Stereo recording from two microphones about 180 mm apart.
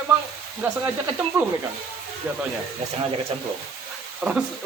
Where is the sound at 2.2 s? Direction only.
10° right (ahead or behind).